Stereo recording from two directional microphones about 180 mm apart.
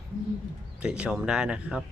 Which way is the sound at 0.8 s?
5° right (ahead or behind).